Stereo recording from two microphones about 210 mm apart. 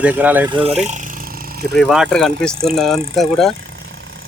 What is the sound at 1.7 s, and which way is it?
Speech, centre (ahead or behind).